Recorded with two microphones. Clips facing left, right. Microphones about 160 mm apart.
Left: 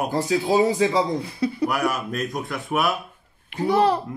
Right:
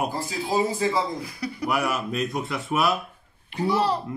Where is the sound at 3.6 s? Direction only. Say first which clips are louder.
Left 4 dB; 55° left (ahead or behind).